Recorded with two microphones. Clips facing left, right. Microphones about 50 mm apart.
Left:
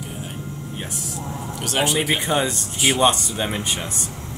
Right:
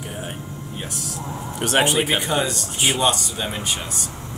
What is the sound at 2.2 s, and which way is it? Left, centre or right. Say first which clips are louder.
Speech: left 1 dB; left.